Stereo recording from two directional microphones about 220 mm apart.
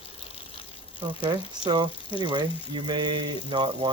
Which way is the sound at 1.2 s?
20° right (ahead or behind).